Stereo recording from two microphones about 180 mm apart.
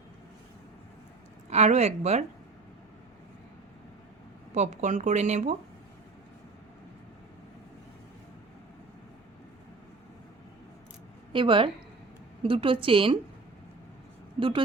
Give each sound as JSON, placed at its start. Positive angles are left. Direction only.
{"t": 1.5, "sound": "speech", "side_deg": -40}
{"t": 4.5, "sound": "speech", "side_deg": -40}
{"t": 11.3, "sound": "a woman's voice", "side_deg": -30}
{"t": 14.3, "sound": "a woman's voice", "side_deg": -30}